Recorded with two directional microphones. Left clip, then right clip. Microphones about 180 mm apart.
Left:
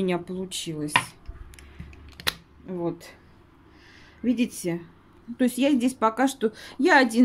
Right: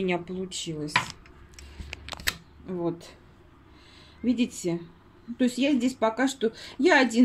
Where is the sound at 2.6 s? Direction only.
5° left (ahead or behind).